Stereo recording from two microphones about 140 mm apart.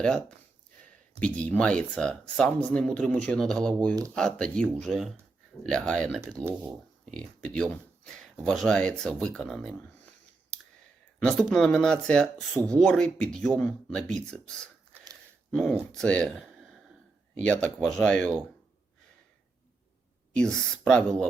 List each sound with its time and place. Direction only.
0.0 s speech: 5° left (ahead or behind)
6.2 s speech: 15° right (ahead or behind)
7.0 s speech: 5° left (ahead or behind)
11.2 s speech: 5° left (ahead or behind)
20.3 s speech: 5° left (ahead or behind)